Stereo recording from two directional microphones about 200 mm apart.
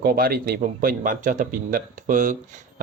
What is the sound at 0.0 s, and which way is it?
A man's voice, 45° right (ahead or behind).